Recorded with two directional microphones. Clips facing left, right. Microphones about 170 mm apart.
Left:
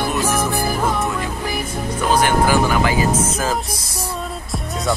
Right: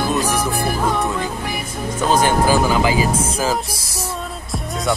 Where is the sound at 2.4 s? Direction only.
15° right (ahead or behind).